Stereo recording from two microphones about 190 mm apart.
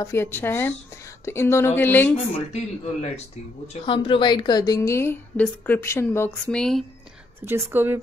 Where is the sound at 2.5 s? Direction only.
35° left (ahead or behind).